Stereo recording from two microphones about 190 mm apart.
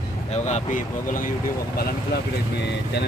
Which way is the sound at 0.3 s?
35° left (ahead or behind).